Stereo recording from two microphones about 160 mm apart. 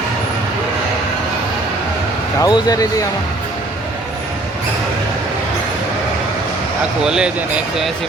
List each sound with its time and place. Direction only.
2.4 s speech: 25° left (ahead or behind)
7.0 s speech: 5° right (ahead or behind)